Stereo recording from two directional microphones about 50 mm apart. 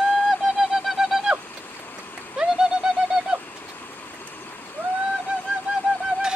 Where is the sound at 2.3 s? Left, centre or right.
Centre.